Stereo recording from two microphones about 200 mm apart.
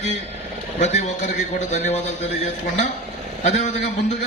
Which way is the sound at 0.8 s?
35° left (ahead or behind).